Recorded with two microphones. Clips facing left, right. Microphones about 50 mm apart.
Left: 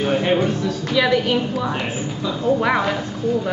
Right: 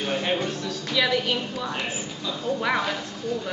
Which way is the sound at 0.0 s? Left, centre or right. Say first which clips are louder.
Left 7 dB; centre.